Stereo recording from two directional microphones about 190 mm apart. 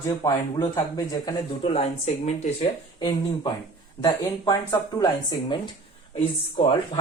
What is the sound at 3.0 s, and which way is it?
Speech, 20° left (ahead or behind).